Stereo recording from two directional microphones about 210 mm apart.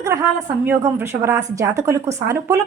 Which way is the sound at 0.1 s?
10° right (ahead or behind).